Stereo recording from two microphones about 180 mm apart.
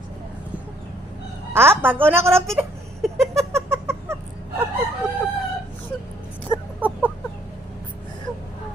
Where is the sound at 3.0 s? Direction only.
Centre (ahead or behind).